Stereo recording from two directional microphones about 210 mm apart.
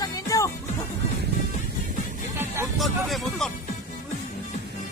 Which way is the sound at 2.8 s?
Centre (ahead or behind).